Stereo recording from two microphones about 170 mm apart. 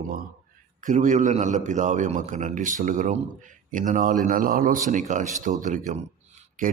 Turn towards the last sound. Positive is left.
turn(degrees=-45)  # may be behind; listen again after turning